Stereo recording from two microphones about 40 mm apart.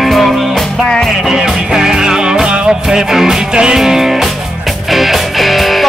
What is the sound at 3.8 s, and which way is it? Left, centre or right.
Music, centre.